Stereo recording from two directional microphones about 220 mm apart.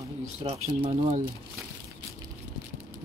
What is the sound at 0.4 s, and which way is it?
Speech, 25° right (ahead or behind).